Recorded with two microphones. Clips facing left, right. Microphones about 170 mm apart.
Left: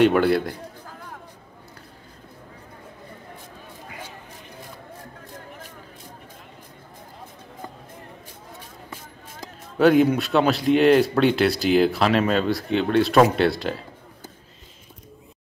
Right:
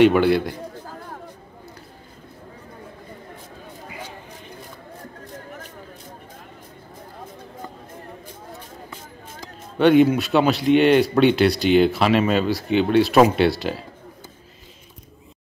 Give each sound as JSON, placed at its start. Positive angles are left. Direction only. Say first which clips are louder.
{"t": 0.0, "sound": "speech", "louder": "right 2 dB", "side_deg": 0}
{"t": 9.8, "sound": "speech", "louder": "right 2 dB", "side_deg": 0}